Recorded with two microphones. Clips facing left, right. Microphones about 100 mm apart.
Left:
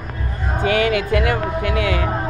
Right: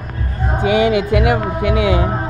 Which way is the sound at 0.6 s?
20° right (ahead or behind).